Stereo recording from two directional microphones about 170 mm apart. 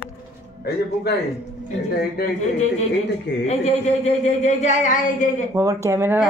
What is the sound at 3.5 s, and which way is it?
A woman's voice, 40° left (ahead or behind).